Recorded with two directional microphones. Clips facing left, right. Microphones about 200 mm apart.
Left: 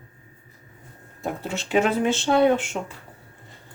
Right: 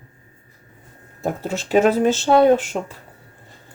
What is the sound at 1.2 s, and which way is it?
Speech, 40° right (ahead or behind).